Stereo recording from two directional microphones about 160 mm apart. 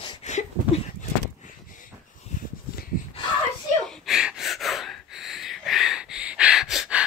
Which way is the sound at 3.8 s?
5° right (ahead or behind).